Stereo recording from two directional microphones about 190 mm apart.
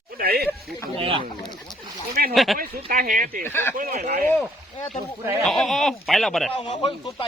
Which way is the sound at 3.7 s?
45° right (ahead or behind).